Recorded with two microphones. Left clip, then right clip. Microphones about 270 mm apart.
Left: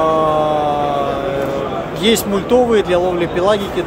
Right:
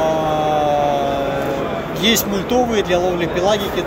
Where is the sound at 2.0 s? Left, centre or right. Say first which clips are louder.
Left 2 dB; centre.